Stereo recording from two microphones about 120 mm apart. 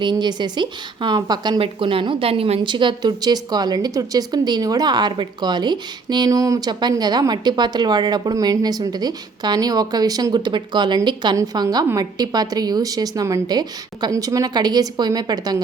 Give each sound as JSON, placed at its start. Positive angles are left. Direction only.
{"t": 0.0, "sound": "a woman's voice", "side_deg": -40}
{"t": 1.5, "sound": "a woman's voice", "side_deg": -50}